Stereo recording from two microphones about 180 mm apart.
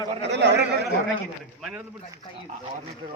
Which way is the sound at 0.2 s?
70° right (ahead or behind).